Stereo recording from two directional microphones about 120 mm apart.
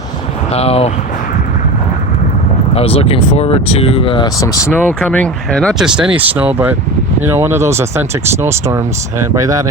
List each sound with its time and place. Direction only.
0.5 s speech: 55° left (ahead or behind)
2.7 s speech: 55° left (ahead or behind)
4.4 s speech: 25° left (ahead or behind)
4.9 s speech: 10° left (ahead or behind)
5.8 s speech: 5° right (ahead or behind); by 9.6 s 25° right (ahead or behind)